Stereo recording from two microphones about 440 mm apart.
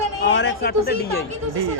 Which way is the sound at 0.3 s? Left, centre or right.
Left.